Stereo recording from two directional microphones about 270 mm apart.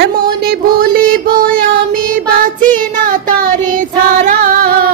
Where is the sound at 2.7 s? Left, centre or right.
Right.